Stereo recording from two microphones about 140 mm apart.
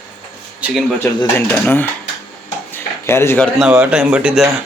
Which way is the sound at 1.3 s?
15° left (ahead or behind).